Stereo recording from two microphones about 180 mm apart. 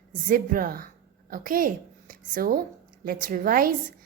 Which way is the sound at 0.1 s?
50° right (ahead or behind).